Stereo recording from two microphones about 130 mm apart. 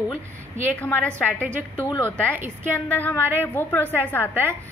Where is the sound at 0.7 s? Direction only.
10° left (ahead or behind).